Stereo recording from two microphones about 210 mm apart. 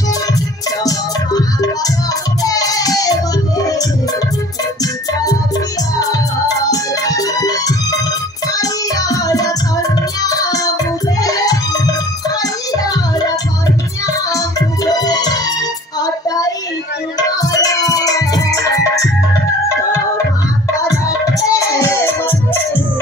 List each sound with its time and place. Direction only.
0.8 s music: 15° left (ahead or behind)
5.9 s music: 15° left (ahead or behind)
16.0 s child singing: 15° left (ahead or behind)
17.2 s music: 15° left (ahead or behind)
20.8 s music: 15° left (ahead or behind)